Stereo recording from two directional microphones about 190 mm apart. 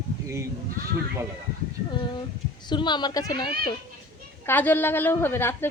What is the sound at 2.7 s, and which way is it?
Speech, 25° left (ahead or behind).